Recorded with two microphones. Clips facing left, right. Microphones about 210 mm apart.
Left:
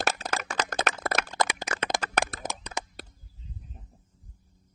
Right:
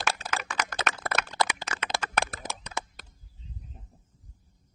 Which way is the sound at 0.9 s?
45° left (ahead or behind).